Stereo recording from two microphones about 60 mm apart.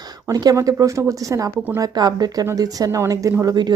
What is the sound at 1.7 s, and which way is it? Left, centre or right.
Speech, right.